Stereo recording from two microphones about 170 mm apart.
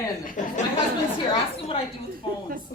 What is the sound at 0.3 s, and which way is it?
Speech, 45° left (ahead or behind).